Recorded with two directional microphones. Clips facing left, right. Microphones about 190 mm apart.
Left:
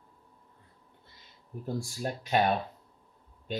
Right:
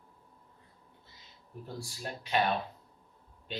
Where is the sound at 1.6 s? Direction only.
50° left (ahead or behind).